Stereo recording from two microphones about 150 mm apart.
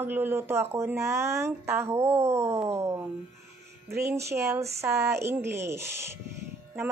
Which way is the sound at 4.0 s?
20° right (ahead or behind).